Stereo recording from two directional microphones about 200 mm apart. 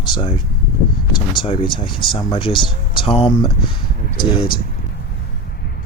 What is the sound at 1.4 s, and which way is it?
Speech, 25° left (ahead or behind).